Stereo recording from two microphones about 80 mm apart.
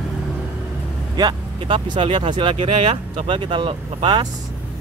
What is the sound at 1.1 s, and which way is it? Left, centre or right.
Speech, right.